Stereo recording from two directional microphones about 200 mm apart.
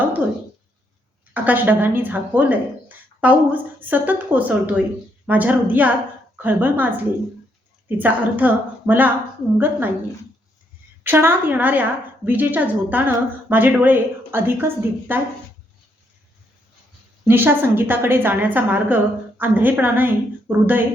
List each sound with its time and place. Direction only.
1.3 s a woman's voice: 10° right (ahead or behind)
11.0 s a woman's voice: 10° right (ahead or behind)
17.2 s a woman's voice: 10° right (ahead or behind)